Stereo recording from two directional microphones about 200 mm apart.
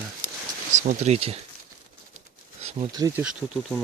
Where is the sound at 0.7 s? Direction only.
35° right (ahead or behind).